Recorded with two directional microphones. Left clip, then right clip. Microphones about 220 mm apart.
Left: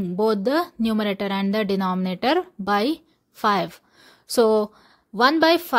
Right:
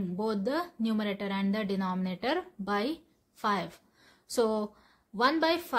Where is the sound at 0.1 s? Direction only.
35° left (ahead or behind).